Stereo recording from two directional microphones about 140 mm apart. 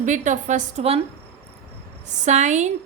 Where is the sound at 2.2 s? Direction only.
55° right (ahead or behind).